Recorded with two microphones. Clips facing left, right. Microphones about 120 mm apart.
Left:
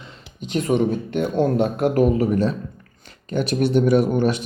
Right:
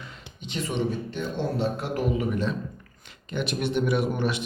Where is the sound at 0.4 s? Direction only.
45° left (ahead or behind).